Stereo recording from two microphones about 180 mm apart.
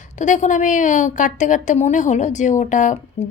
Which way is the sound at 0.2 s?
45° left (ahead or behind).